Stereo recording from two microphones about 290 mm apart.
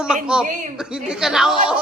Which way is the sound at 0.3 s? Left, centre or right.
Centre.